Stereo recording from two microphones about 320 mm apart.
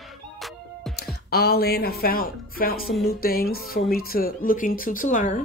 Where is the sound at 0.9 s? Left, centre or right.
Left.